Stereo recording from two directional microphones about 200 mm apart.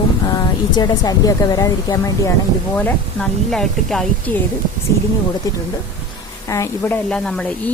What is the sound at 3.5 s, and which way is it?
Speech, 5° left (ahead or behind).